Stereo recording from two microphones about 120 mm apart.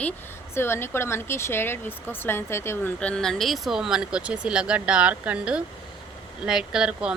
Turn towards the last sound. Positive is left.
turn(degrees=-5)  # may be behind; listen again after turning